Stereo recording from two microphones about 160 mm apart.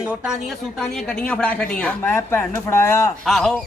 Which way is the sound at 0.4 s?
Centre (ahead or behind).